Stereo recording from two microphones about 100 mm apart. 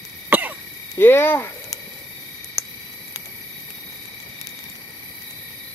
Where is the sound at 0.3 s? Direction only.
20° right (ahead or behind).